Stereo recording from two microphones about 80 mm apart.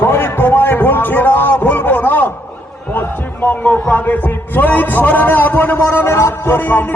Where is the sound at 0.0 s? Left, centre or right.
Left.